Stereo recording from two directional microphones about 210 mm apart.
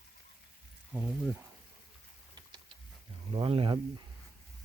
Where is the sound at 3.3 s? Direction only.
25° right (ahead or behind).